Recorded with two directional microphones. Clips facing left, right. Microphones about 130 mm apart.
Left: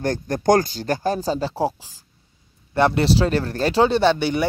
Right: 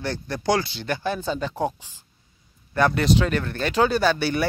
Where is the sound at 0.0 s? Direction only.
45° left (ahead or behind).